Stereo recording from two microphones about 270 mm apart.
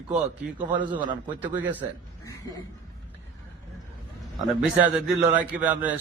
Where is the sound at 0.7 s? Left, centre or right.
Centre.